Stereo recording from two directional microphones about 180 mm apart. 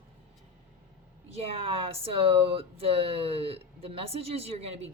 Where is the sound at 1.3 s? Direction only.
35° right (ahead or behind).